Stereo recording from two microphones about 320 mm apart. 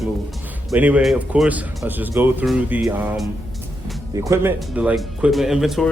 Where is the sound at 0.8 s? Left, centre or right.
Centre.